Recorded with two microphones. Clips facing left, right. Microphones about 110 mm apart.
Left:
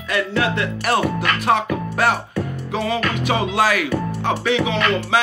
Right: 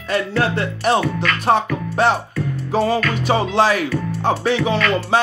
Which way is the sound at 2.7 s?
35° right (ahead or behind).